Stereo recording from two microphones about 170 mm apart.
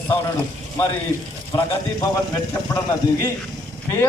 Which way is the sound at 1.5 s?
25° left (ahead or behind).